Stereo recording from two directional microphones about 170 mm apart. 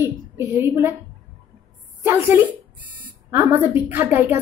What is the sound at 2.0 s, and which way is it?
A woman's voice, 15° right (ahead or behind).